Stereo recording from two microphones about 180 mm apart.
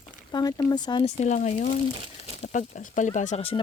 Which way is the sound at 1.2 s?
40° left (ahead or behind).